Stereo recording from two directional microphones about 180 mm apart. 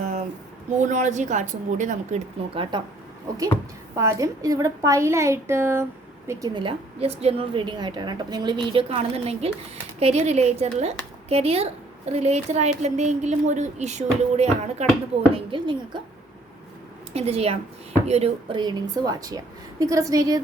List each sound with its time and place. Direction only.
0.0 s a sound: 40° right (ahead or behind)
0.8 s a woman's voice: 45° right (ahead or behind)
2.6 s a woman's voice: 25° right (ahead or behind)
3.9 s a woman's voice: 15° right (ahead or behind); by 14.8 s 35° right (ahead or behind)
15.5 s a woman's voice: 25° right (ahead or behind)
17.2 s a woman's voice: 35° right (ahead or behind)